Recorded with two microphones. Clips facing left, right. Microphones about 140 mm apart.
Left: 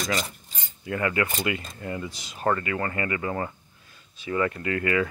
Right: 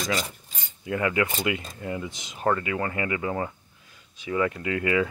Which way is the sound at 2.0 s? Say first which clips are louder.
Even; 20° right (ahead or behind).